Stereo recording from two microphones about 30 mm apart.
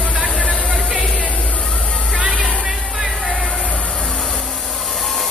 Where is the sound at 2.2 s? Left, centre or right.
Centre.